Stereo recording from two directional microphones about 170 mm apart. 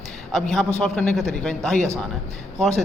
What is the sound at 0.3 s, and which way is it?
A man's voice, 5° left (ahead or behind).